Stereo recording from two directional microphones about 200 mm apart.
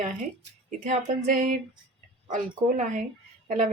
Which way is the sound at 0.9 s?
40° right (ahead or behind).